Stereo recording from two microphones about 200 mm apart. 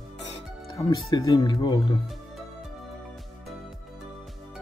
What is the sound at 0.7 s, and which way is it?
Speech, 20° left (ahead or behind).